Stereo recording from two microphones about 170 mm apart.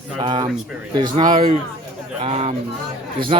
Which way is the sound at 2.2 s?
35° right (ahead or behind).